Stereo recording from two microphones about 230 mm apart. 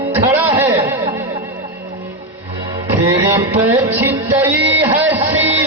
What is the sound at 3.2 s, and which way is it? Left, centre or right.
Music, centre.